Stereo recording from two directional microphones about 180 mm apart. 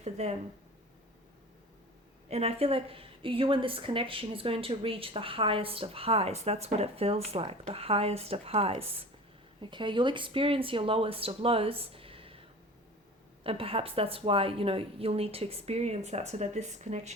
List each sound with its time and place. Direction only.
0.0 s a woman's voice: 35° right (ahead or behind)
2.3 s a woman's voice: 35° right (ahead or behind)
13.4 s a woman's voice: 30° right (ahead or behind)